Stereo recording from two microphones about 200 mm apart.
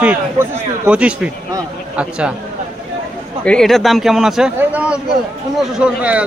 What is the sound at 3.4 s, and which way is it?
A man's voice, 5° left (ahead or behind).